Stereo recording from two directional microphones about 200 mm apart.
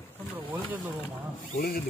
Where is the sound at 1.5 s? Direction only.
45° left (ahead or behind).